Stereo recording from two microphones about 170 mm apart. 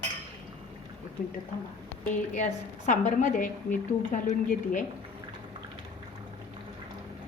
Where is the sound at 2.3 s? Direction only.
45° left (ahead or behind).